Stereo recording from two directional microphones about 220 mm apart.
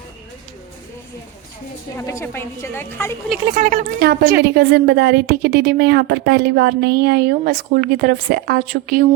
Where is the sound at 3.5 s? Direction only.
40° right (ahead or behind).